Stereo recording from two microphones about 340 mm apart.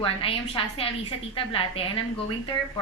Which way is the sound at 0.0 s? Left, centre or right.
Centre.